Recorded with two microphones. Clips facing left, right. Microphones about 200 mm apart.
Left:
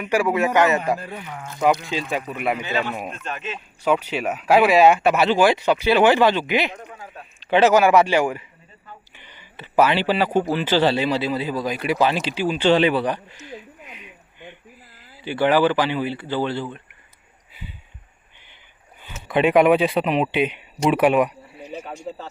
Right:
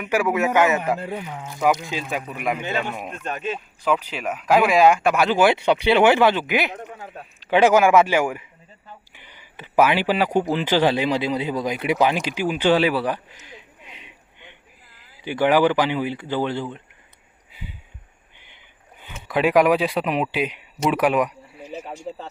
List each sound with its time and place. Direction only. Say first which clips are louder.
0.1 s speech: left 1 dB; 10° right (ahead or behind)
0.9 s speech: right 3 dB; 20° right (ahead or behind); by 2.4 s 5° right (ahead or behind)
3.2 s speech: right 3 dB; 35° right (ahead or behind)
4.2 s speech: left 1 dB; 10° left (ahead or behind)
5.4 s speech: even; 10° right (ahead or behind)
13.6 s a sound: left 5 dB; 25° right (ahead or behind)
14.9 s speech: even; 15° right (ahead or behind)
19.0 s speech: left 2 dB; centre (ahead or behind)